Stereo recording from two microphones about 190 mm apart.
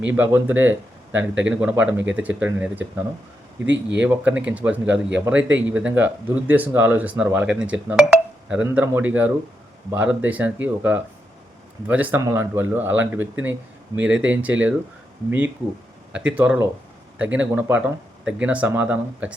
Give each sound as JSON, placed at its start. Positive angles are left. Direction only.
{"t": 0.1, "sound": "speech", "side_deg": -10}
{"t": 3.7, "sound": "speech", "side_deg": -70}
{"t": 4.0, "sound": "speech", "side_deg": -5}
{"t": 16.1, "sound": "speech", "side_deg": -5}